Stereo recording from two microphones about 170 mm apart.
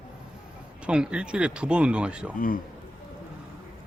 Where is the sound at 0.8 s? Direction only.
5° right (ahead or behind).